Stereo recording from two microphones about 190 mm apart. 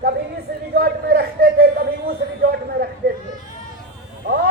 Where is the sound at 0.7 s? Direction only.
55° right (ahead or behind).